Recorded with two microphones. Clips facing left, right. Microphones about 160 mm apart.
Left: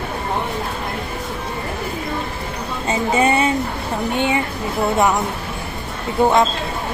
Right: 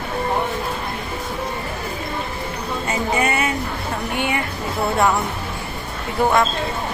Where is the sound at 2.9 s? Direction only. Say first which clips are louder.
Left 5 dB; 30° left (ahead or behind).